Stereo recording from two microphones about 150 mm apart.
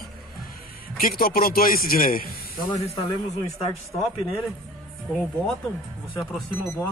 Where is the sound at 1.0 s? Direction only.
80° left.